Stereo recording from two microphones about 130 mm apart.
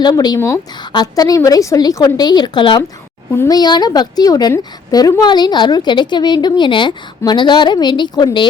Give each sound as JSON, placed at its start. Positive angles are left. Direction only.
{"t": 0.0, "sound": "a woman's voice", "side_deg": 30}
{"t": 0.3, "sound": "a woman's voice", "side_deg": 20}
{"t": 3.3, "sound": "a woman's voice", "side_deg": 20}
{"t": 3.6, "sound": "a woman's voice", "side_deg": 30}